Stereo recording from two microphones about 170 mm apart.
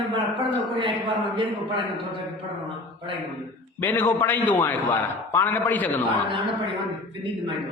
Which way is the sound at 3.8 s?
10° left (ahead or behind).